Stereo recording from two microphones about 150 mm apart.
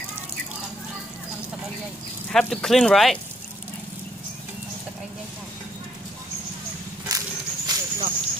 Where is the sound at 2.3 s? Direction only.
5° left (ahead or behind).